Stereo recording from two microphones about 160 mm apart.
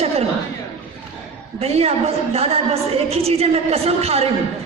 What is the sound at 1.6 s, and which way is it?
A woman's voice, 40° right (ahead or behind).